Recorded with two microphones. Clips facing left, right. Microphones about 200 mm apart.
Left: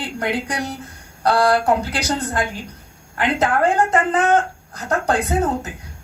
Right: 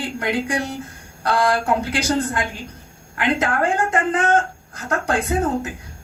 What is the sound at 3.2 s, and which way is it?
Speech, 35° left (ahead or behind).